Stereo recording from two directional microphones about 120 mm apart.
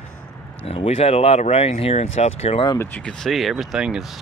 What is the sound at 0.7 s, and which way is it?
Speech, 55° left (ahead or behind).